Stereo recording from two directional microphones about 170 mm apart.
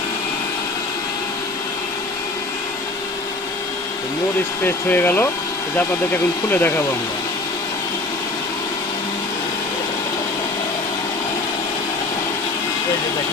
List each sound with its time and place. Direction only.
4.6 s speech: 10° left (ahead or behind)
6.5 s speech: 10° left (ahead or behind)